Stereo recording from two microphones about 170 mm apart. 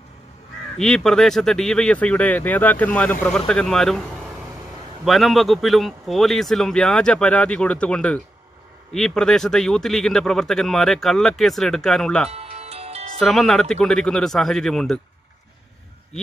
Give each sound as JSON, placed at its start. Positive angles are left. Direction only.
{"t": 0.7, "sound": "speech", "side_deg": 5}
{"t": 12.3, "sound": "music", "side_deg": -35}
{"t": 13.2, "sound": "speech", "side_deg": 0}